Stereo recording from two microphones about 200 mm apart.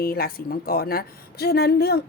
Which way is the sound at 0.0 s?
50° left (ahead or behind).